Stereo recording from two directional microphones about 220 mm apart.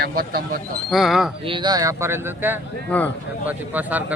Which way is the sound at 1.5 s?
20° right (ahead or behind).